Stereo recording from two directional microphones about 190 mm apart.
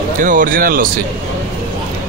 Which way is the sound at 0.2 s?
45° right (ahead or behind).